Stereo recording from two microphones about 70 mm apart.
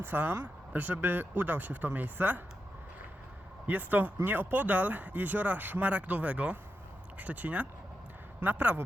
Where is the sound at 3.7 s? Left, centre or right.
Right.